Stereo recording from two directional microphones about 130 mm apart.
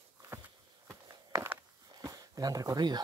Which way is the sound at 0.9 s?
20° right (ahead or behind).